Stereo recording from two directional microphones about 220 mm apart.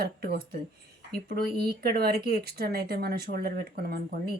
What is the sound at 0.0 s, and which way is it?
Speech, 45° right (ahead or behind).